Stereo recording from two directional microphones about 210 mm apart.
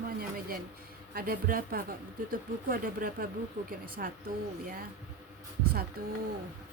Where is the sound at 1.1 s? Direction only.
45° right (ahead or behind).